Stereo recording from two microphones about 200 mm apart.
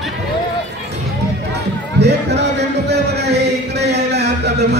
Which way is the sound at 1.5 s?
55° right (ahead or behind).